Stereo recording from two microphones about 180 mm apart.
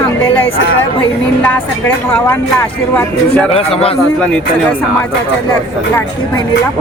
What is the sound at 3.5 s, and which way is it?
Speech, 30° left (ahead or behind).